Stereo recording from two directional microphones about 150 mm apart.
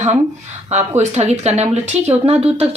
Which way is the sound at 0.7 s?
50° right (ahead or behind).